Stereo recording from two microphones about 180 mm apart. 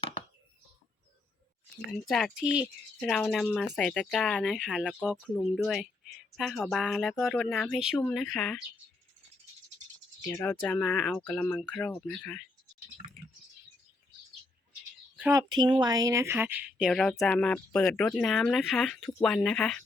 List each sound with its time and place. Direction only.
1.9 s speech: centre (ahead or behind)
10.2 s speech: 10° left (ahead or behind)
15.3 s speech: 20° right (ahead or behind); by 19.8 s centre (ahead or behind)